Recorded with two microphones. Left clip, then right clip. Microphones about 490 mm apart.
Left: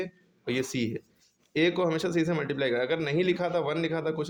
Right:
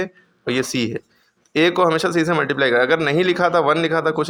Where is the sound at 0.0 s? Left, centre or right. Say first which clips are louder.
Right 10 dB; left.